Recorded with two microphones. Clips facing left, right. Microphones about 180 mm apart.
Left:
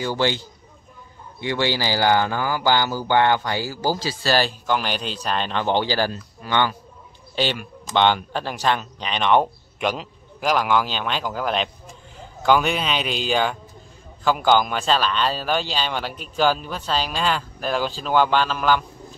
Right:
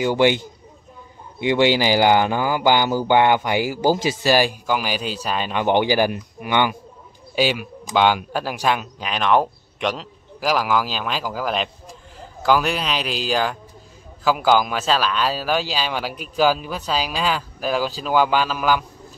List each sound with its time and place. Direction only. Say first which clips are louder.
0.0 s speech: right 5 dB; 15° right (ahead or behind)
1.4 s a man's voice: right 6 dB; 15° right (ahead or behind)